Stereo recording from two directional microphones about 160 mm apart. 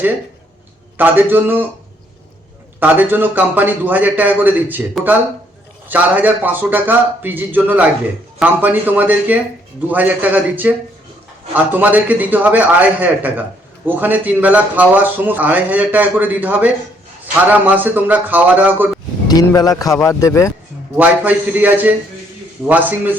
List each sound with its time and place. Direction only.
0.9 s speech: 10° right (ahead or behind)
2.8 s speech: 10° right (ahead or behind)
5.9 s speech: 10° right (ahead or behind)
19.3 s a man's voice: 25° left (ahead or behind)
20.9 s speech: 10° right (ahead or behind)